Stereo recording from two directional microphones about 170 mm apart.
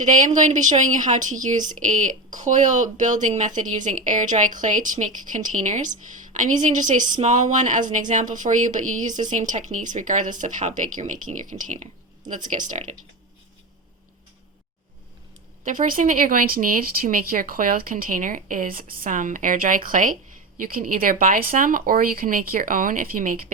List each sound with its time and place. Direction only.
0.0 s speech: 45° right (ahead or behind)
15.6 s speech: 50° right (ahead or behind)